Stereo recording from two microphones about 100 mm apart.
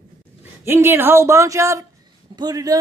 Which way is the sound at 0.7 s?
25° right (ahead or behind).